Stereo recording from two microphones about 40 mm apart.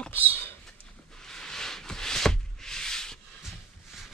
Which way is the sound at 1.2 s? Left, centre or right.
Centre.